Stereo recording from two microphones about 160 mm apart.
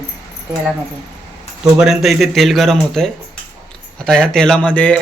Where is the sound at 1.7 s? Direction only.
Centre (ahead or behind).